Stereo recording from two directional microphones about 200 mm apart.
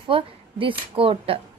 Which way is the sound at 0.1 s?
25° right (ahead or behind).